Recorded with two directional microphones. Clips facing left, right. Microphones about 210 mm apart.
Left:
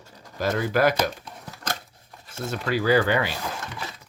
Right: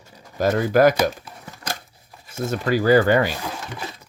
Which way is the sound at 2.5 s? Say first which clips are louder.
Right 5 dB; 45° right (ahead or behind).